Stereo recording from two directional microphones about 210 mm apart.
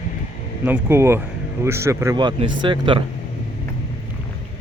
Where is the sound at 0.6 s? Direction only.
10° right (ahead or behind).